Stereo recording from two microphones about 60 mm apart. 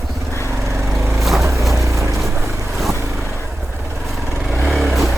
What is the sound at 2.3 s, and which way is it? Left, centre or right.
Boat, right.